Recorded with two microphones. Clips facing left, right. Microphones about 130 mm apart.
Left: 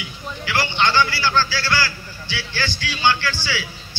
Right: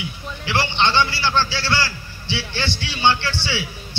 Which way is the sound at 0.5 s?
25° right (ahead or behind).